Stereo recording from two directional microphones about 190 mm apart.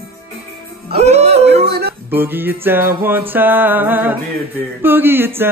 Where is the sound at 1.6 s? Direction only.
60° right (ahead or behind).